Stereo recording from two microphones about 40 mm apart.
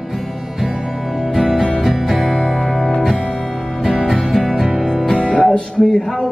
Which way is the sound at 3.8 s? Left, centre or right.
Centre.